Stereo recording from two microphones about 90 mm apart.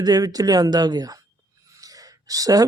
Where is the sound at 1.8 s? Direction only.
40° right (ahead or behind).